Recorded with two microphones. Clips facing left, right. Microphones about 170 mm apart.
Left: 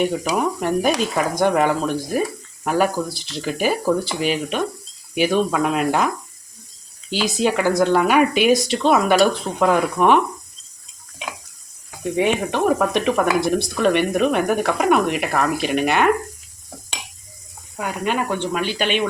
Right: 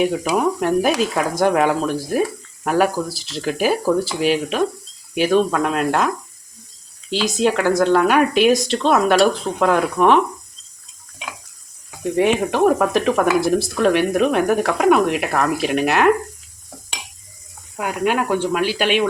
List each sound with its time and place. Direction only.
0.0 s speech: centre (ahead or behind)
7.1 s speech: centre (ahead or behind)
12.1 s speech: centre (ahead or behind)
17.7 s speech: 5° right (ahead or behind)